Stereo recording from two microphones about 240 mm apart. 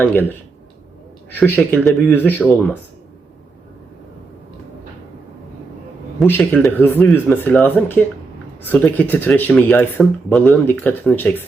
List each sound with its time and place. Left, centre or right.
0.0 s speech: centre
6.1 s speech: centre